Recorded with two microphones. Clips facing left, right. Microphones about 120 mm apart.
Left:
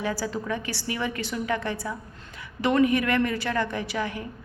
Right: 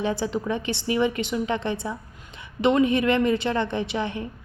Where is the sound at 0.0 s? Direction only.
20° right (ahead or behind).